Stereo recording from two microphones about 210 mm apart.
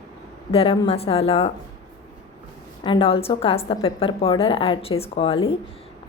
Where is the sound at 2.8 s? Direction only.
25° left (ahead or behind).